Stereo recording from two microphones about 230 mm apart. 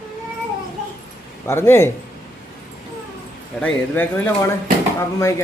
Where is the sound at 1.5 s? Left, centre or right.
Centre.